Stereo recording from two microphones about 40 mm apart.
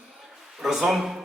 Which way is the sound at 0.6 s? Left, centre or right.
Centre.